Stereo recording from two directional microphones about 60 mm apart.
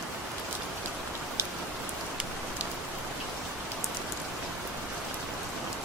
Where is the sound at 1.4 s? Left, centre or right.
Right.